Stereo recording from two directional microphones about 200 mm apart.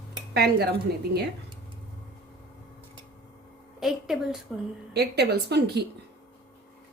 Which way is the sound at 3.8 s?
Centre (ahead or behind).